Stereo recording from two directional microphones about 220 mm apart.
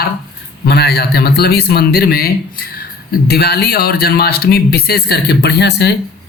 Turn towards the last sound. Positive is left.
turn(degrees=50)  # may be behind; listen again after turning